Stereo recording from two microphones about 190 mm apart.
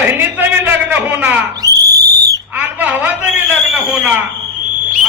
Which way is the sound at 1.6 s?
20° right (ahead or behind).